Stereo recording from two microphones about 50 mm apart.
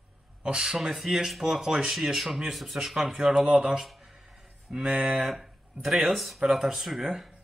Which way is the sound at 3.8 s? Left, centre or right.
Centre.